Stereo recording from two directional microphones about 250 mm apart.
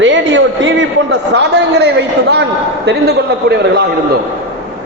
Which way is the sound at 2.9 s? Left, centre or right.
Right.